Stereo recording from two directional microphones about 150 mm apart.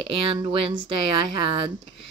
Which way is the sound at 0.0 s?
35° right (ahead or behind).